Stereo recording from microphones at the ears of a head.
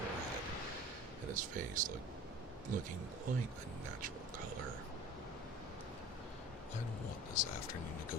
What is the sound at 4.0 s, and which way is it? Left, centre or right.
Speech, right.